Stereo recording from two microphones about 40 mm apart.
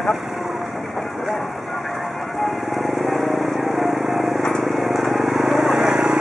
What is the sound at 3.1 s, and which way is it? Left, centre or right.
Vehicle, centre.